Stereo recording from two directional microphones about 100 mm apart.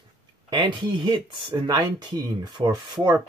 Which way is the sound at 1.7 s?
40° right (ahead or behind).